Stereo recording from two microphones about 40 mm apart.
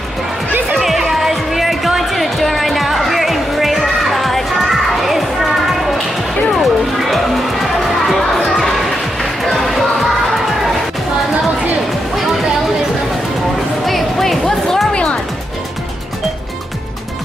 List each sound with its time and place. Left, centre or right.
0.7 s music: centre
13.8 s music: centre
14.9 s music: left